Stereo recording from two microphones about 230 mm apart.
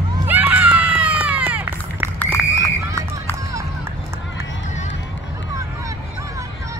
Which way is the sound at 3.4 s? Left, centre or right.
Centre.